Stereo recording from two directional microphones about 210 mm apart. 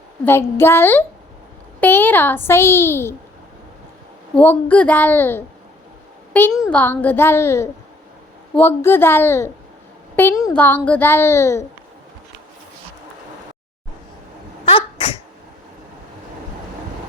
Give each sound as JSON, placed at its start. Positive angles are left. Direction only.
{"t": 0.3, "sound": "a child's voice", "side_deg": 10}
{"t": 4.4, "sound": "a child's voice", "side_deg": 5}
{"t": 14.6, "sound": "sneeze", "side_deg": 25}